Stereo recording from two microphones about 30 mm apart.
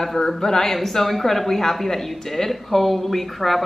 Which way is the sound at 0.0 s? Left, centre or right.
Centre.